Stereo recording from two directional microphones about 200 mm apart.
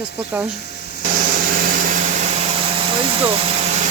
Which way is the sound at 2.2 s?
30° right (ahead or behind).